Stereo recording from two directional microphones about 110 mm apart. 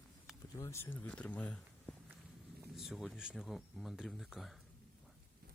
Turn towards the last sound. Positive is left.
turn(degrees=0)  # may be behind; listen again after turning